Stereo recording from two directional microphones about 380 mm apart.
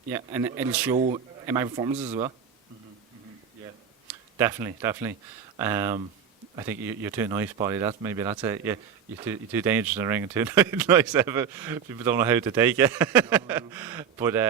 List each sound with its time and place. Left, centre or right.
0.1 s speech: centre
0.9 s speech: centre
4.1 s speech: centre